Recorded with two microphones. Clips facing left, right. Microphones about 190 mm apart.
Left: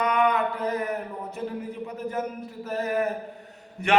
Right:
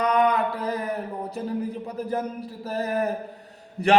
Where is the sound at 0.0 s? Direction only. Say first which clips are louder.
Right 2 dB; 35° right (ahead or behind).